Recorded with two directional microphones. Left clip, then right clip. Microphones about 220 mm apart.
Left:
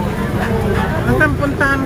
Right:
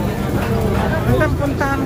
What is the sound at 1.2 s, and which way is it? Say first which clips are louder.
Speech: left 4 dB; 40° left (ahead or behind).